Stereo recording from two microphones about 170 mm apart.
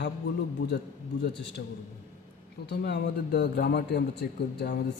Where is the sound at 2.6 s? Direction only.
75° left (ahead or behind).